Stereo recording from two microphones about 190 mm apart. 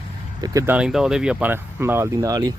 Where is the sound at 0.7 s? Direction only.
5° right (ahead or behind).